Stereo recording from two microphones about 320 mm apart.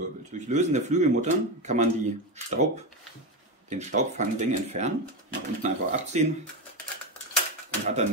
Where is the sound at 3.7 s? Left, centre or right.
Right.